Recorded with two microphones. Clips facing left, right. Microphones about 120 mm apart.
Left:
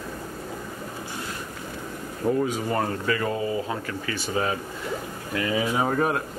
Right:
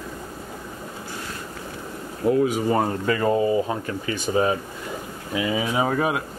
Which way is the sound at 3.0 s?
30° right (ahead or behind).